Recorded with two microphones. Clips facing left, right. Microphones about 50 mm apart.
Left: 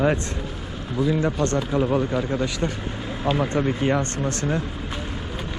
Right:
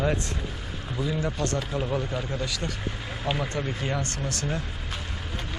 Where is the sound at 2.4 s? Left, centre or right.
Left.